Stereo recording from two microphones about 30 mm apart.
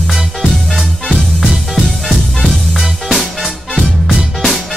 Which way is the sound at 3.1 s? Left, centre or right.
Centre.